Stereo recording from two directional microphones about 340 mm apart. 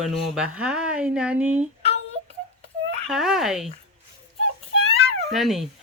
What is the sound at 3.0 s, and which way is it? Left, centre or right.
Speech, centre.